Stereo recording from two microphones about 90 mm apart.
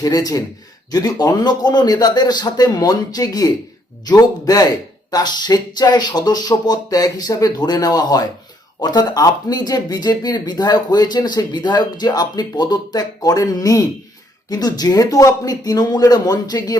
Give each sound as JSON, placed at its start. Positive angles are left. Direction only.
{"t": 0.0, "sound": "speech", "side_deg": 45}